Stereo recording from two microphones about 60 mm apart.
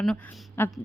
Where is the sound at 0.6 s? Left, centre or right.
Left.